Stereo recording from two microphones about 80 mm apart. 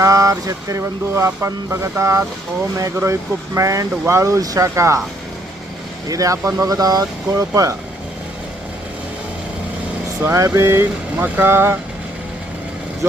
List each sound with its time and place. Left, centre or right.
0.0 s speech: right
6.1 s speech: right
10.2 s speech: right